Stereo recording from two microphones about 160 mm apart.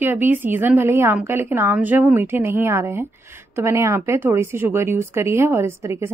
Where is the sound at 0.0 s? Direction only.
10° right (ahead or behind).